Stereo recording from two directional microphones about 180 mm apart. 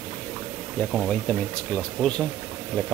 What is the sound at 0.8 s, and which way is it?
Speech, centre (ahead or behind).